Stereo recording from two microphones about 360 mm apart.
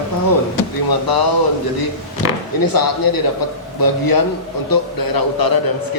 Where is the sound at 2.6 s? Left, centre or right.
Left.